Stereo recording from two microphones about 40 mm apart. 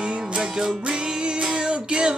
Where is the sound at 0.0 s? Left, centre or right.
Right.